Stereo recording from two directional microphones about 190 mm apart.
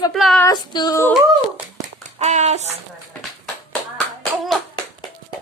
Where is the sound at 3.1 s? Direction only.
Centre (ahead or behind).